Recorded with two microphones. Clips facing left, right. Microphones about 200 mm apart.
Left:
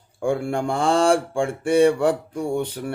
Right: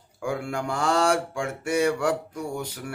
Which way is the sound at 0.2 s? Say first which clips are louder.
Left 6 dB; 30° left (ahead or behind).